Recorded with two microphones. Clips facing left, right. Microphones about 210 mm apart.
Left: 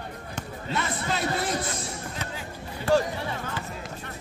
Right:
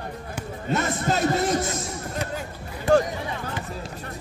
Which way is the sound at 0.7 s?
45° right (ahead or behind).